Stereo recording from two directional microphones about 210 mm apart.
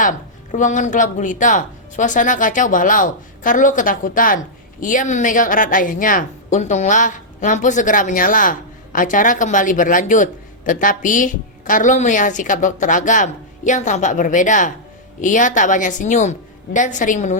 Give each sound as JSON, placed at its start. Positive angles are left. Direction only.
{"t": 0.0, "sound": "speech", "side_deg": 40}